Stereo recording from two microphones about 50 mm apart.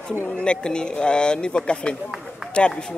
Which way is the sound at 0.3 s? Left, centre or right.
Centre.